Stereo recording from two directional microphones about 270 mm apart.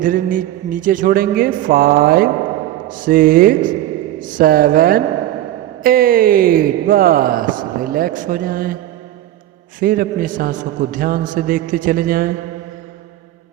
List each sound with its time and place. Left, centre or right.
0.0 s speech: right
9.8 s speech: right